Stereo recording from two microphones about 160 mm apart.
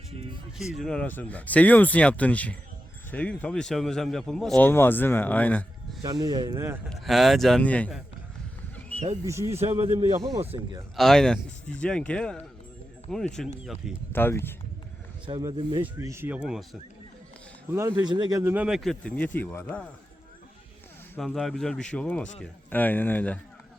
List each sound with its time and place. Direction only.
0.6 s speech: centre (ahead or behind)
4.6 s speech: 15° left (ahead or behind)
6.0 s speech: 25° right (ahead or behind)
6.8 s speech: centre (ahead or behind)
9.2 s speech: 20° right (ahead or behind)
9.6 s a man's voice: 40° right (ahead or behind)
10.9 s speech: centre (ahead or behind)
14.1 s speech: 15° left (ahead or behind)
15.3 s speech: 25° right (ahead or behind)
15.8 s speech: 15° right (ahead or behind)
17.7 s speech: 20° right (ahead or behind); by 19.6 s 10° left (ahead or behind)
21.2 s speech: centre (ahead or behind)